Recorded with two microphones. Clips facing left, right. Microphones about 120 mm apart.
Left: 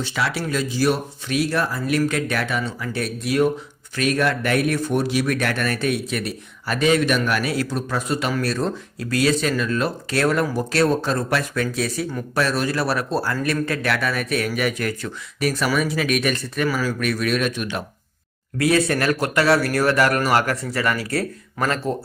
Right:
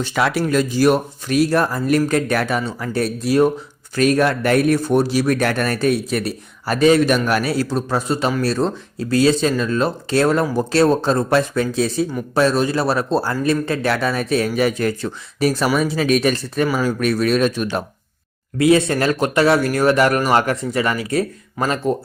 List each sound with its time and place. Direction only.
0.0 s speech: 50° right (ahead or behind)
18.5 s speech: 20° right (ahead or behind)